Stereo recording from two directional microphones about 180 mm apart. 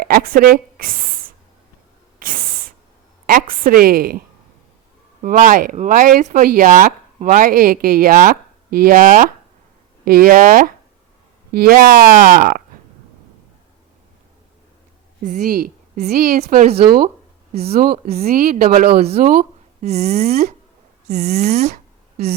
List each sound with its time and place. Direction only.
0.0 s speech: 55° right (ahead or behind)
2.1 s a sound: 50° right (ahead or behind)
3.2 s speech: 55° right (ahead or behind)
5.2 s speech: 45° right (ahead or behind)
15.2 s a woman's voice: 45° right (ahead or behind)
17.5 s speech: 35° right (ahead or behind)
17.7 s speech: 55° right (ahead or behind)
19.8 s speech: 35° right (ahead or behind)